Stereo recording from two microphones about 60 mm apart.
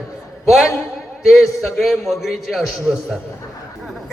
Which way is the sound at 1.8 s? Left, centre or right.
Centre.